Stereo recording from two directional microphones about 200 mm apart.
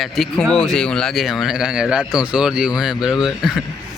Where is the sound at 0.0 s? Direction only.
Centre (ahead or behind).